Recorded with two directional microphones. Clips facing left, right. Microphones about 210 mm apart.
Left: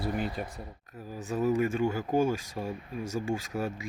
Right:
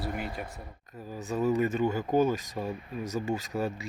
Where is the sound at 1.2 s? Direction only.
10° left (ahead or behind).